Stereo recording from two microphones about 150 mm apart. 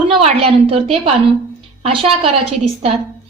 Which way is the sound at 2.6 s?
40° right (ahead or behind).